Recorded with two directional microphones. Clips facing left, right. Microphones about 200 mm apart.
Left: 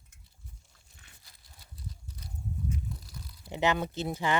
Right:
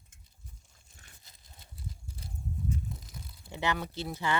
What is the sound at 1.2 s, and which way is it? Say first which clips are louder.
Livestock: right 1 dB; 20° right (ahead or behind).